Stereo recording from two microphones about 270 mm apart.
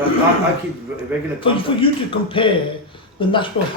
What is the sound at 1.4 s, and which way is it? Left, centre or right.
A man's voice, centre.